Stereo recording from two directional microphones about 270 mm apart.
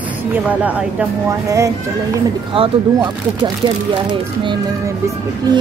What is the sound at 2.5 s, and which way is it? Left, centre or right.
Speech, centre.